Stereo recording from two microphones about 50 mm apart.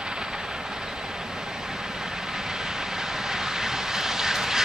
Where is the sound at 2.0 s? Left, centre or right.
Centre.